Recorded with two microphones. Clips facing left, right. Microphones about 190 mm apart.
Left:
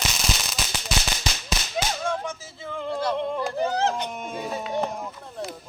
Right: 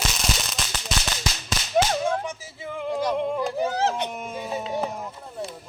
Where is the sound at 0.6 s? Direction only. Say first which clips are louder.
Even; centre (ahead or behind).